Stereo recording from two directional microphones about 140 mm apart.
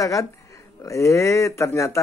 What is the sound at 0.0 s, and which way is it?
Speech, 25° left (ahead or behind).